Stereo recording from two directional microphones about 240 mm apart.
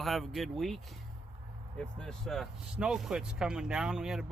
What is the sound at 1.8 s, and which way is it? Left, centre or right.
Speech, centre.